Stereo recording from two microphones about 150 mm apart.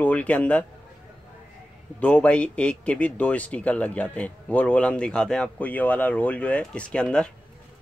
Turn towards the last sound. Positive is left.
turn(degrees=5)  # may be behind; listen again after turning